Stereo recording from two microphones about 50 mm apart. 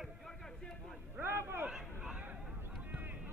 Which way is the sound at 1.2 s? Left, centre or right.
Right.